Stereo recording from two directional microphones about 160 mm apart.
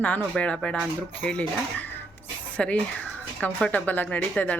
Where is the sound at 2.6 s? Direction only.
10° left (ahead or behind).